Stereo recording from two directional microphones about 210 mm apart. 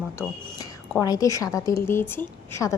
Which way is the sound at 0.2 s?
15° left (ahead or behind).